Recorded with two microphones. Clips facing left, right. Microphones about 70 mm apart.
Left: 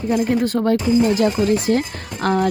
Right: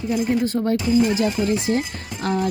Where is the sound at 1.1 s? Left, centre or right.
Left.